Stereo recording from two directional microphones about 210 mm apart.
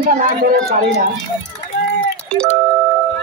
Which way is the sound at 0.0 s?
40° right (ahead or behind).